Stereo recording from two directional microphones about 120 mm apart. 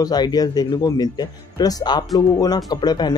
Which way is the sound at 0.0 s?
35° left (ahead or behind).